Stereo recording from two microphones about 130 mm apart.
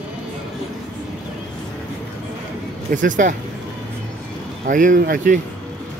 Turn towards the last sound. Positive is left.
turn(degrees=-85)